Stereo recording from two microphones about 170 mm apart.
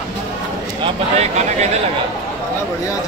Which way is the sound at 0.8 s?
40° right (ahead or behind).